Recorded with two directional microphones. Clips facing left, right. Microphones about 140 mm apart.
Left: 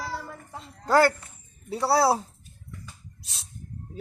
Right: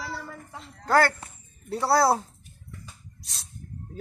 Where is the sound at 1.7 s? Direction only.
Centre (ahead or behind).